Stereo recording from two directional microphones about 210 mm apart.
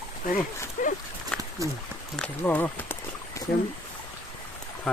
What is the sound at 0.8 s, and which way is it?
Speech, 40° left (ahead or behind).